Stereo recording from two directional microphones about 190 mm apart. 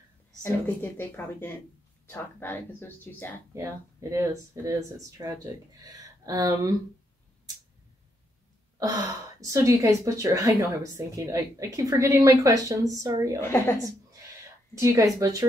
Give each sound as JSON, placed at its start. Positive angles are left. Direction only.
{"t": 0.4, "sound": "a woman's voice", "side_deg": 10}
{"t": 3.5, "sound": "a woman's voice", "side_deg": -15}
{"t": 8.7, "sound": "a woman's voice", "side_deg": -20}
{"t": 13.4, "sound": "a woman's voice", "side_deg": 15}
{"t": 14.8, "sound": "a woman's voice", "side_deg": -15}